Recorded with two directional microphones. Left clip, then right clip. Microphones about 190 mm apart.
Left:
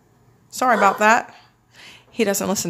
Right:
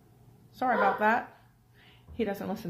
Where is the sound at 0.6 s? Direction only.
40° left (ahead or behind).